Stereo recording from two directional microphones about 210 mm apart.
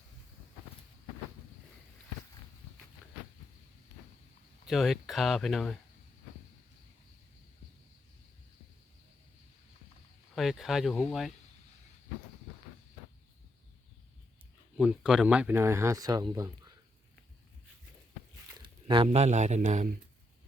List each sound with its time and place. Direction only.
4.6 s speech: centre (ahead or behind)
10.3 s speech: centre (ahead or behind)
14.8 s speech: 5° right (ahead or behind)
18.6 s a sound: 20° right (ahead or behind)
19.0 s speech: 35° right (ahead or behind)